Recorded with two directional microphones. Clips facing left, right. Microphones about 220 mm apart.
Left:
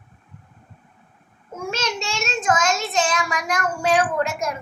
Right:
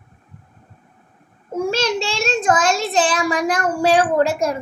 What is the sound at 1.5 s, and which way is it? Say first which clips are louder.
A child's voice: right 7 dB; 35° right (ahead or behind).